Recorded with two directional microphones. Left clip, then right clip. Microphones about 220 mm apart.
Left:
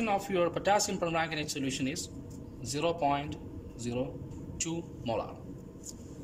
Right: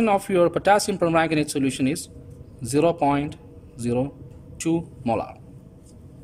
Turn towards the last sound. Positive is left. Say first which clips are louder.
# right 9 dB
turn(degrees=-55)  # may be behind; listen again after turning